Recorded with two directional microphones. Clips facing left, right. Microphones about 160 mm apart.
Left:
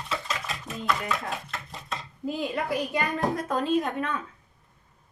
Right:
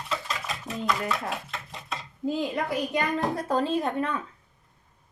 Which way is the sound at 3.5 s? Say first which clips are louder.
Right 1 dB; 30° right (ahead or behind).